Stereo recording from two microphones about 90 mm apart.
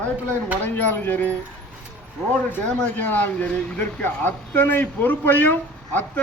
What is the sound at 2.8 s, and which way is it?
Speech, 20° left (ahead or behind).